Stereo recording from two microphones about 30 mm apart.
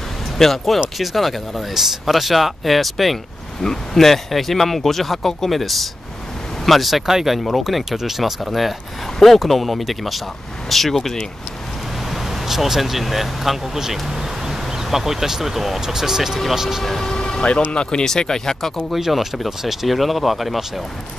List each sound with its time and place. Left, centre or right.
0.4 s speech: centre
1.7 s speech: centre
3.6 s speech: centre
7.1 s speech: centre
7.3 s speech: centre
12.1 s speech: centre
17.0 s a sound: left
17.6 s speech: left
18.0 s speech: centre
18.9 s speech: centre